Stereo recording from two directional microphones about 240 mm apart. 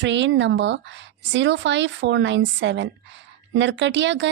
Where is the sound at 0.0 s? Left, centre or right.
Right.